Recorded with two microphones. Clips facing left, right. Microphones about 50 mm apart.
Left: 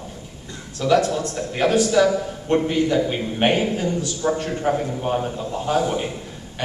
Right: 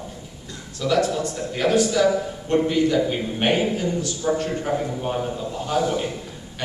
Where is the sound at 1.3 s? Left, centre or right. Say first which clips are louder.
Left 1 dB; left.